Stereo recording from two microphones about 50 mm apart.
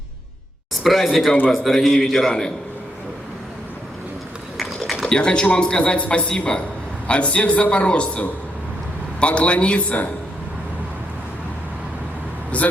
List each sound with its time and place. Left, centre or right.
0.8 s a man's voice: centre
5.0 s speech: centre
12.5 s speech: left